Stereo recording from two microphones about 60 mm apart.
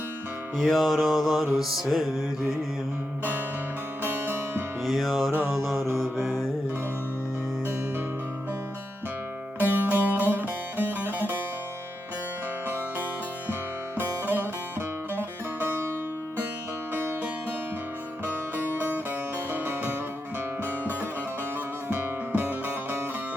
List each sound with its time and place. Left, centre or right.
0.5 s music: centre
4.0 s music: right
4.9 s music: centre
6.0 s mantra: centre
9.6 s music: right
12.6 s music: right
16.9 s music: right
18.5 s music: right